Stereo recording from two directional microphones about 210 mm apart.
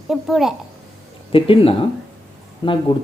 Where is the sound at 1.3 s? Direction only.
25° left (ahead or behind).